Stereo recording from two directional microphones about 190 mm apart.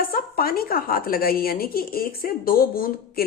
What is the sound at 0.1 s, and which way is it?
A woman's voice, 50° left (ahead or behind).